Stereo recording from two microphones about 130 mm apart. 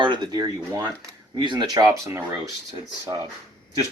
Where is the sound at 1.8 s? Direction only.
20° right (ahead or behind).